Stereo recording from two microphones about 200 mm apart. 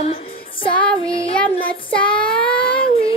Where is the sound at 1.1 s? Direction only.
30° left (ahead or behind).